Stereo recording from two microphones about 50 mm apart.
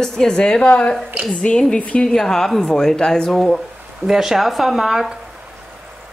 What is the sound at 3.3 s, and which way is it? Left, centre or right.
Speech, centre.